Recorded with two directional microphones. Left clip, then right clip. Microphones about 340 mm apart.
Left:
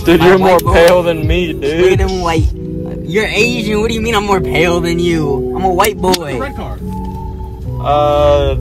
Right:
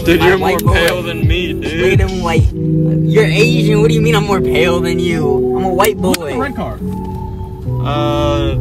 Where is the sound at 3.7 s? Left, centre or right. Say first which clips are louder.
Right 2 dB; centre.